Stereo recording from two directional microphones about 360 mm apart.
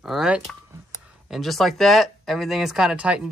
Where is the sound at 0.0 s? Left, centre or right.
Centre.